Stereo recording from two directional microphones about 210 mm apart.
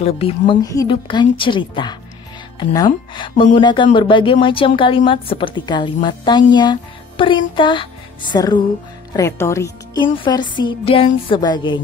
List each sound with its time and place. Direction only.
0.0 s speech: 25° left (ahead or behind)